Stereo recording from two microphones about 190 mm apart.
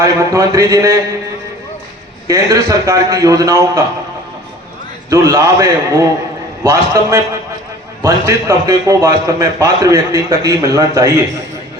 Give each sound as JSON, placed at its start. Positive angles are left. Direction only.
{"t": 0.0, "sound": "a man's voice", "side_deg": -15}
{"t": 2.2, "sound": "a man's voice", "side_deg": -15}
{"t": 5.0, "sound": "a man's voice", "side_deg": -20}